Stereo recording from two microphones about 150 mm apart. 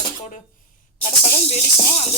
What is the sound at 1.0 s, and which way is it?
Speech, 45° left (ahead or behind).